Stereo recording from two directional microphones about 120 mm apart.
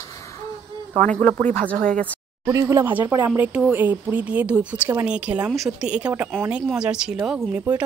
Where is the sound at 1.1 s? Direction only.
15° left (ahead or behind).